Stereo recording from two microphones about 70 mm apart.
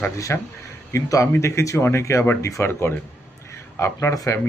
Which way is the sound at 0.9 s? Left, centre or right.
Left.